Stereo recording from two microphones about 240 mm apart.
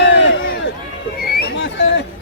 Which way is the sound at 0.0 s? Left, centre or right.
Left.